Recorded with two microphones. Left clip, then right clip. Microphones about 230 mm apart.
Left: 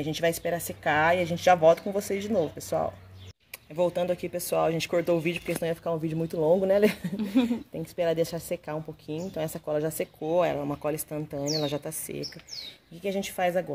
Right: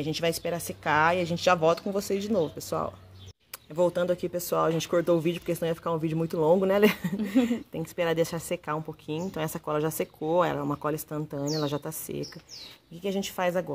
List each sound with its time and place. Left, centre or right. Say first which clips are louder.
0.0 s speech: left 1 dB; centre